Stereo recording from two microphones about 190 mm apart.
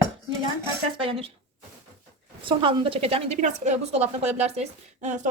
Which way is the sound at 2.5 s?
25° right (ahead or behind).